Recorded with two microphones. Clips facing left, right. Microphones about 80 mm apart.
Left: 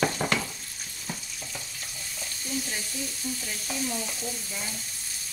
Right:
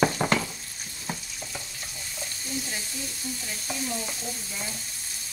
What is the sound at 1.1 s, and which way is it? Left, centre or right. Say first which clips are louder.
Frying: right 3 dB; right.